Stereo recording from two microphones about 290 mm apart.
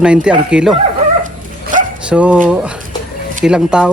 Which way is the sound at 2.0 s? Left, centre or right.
Centre.